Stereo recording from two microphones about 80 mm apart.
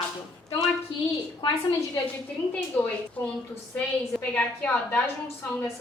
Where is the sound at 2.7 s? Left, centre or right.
Centre.